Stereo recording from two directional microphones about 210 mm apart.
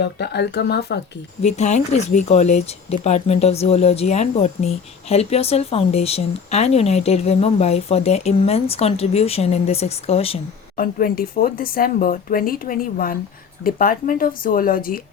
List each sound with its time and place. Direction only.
0.0 s speech: 55° left (ahead or behind)
1.4 s speech: 35° left (ahead or behind)
10.8 s speech: 45° left (ahead or behind)